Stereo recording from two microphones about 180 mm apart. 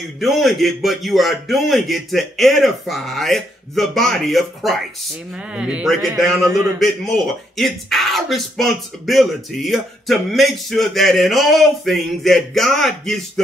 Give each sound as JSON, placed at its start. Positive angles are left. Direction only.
{"t": 0.2, "sound": "speech", "side_deg": 0}
{"t": 6.4, "sound": "a man's voice", "side_deg": -20}
{"t": 6.8, "sound": "speech", "side_deg": 0}